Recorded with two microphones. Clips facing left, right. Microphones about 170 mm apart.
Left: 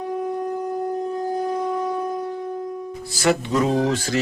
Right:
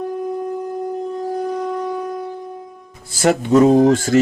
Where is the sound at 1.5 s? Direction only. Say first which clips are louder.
Right 1 dB; centre (ahead or behind).